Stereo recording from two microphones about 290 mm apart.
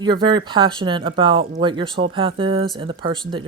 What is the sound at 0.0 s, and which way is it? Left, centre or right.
Speech, centre.